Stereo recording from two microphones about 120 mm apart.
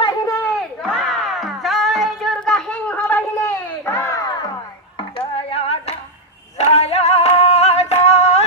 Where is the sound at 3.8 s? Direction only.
20° left (ahead or behind).